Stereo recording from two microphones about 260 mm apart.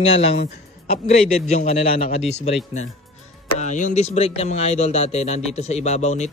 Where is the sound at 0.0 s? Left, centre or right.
Left.